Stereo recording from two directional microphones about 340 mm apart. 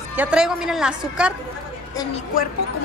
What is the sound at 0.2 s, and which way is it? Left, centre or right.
A woman's voice, centre.